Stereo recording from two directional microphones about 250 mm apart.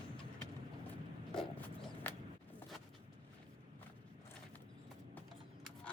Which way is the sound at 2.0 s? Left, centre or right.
Centre.